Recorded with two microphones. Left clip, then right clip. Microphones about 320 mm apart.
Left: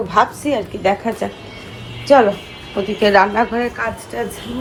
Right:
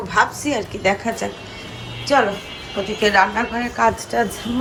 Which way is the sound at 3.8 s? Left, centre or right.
Centre.